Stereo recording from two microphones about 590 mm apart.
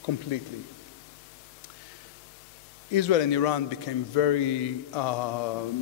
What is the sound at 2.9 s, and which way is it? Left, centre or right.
A man's voice, left.